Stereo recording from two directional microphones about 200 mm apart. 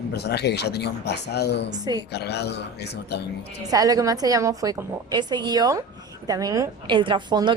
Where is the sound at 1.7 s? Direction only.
20° right (ahead or behind).